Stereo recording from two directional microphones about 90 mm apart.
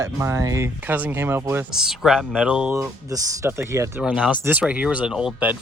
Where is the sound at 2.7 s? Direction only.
40° right (ahead or behind).